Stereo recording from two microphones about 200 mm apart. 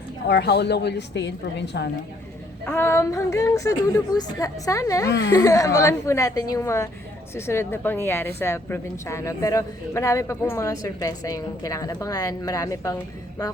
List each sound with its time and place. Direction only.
0.3 s a woman's voice: 60° left (ahead or behind)
2.6 s a woman's voice: 10° left (ahead or behind)
5.0 s a woman's voice: 60° left (ahead or behind)
5.3 s a woman's voice: 15° left (ahead or behind)